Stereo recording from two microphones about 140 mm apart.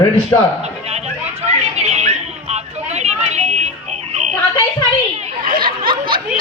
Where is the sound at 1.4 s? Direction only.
50° right (ahead or behind).